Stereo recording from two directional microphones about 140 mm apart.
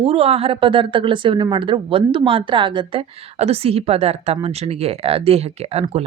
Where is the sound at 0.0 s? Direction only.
45° right (ahead or behind).